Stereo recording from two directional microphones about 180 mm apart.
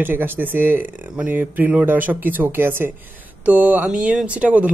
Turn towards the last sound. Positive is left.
turn(degrees=-10)  # may be behind; listen again after turning